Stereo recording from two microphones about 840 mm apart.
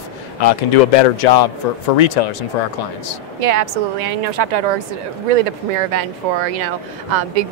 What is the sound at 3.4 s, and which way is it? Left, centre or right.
A woman's voice, right.